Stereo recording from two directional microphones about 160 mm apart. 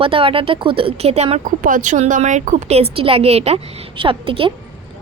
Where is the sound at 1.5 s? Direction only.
55° right (ahead or behind).